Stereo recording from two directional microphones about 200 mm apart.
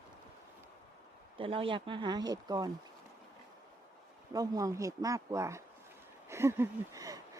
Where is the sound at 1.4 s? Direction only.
25° right (ahead or behind).